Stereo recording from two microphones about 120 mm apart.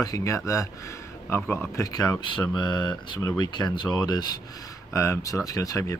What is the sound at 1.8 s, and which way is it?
Speech, 30° left (ahead or behind).